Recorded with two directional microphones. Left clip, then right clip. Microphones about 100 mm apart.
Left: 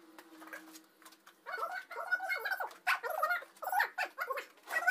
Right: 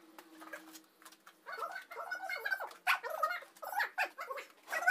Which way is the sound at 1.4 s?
30° left (ahead or behind).